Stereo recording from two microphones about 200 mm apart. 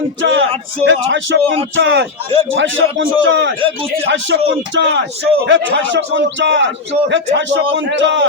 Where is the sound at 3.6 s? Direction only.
25° right (ahead or behind).